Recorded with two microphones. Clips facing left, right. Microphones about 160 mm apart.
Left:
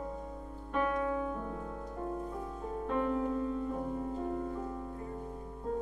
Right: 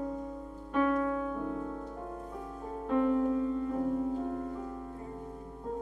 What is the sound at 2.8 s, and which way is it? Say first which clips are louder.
Music: right 5 dB; centre (ahead or behind).